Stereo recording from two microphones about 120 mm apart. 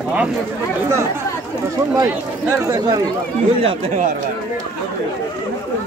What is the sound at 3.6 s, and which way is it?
Speech, 55° right (ahead or behind).